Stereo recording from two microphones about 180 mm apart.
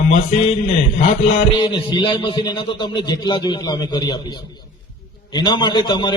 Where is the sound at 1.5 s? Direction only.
25° left (ahead or behind).